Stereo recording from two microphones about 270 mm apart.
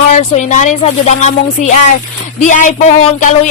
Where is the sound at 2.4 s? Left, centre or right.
Left.